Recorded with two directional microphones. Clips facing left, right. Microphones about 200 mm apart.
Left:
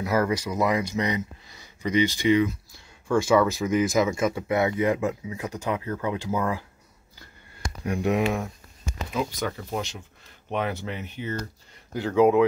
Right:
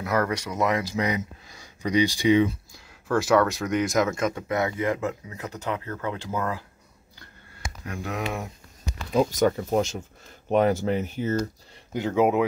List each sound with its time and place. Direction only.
0.0 s speech: 5° left (ahead or behind)
0.9 s speech: 10° right (ahead or behind)
3.1 s speech: centre (ahead or behind)
7.8 s speech: 15° left (ahead or behind)
9.1 s speech: 40° right (ahead or behind)
11.9 s speech: 20° right (ahead or behind)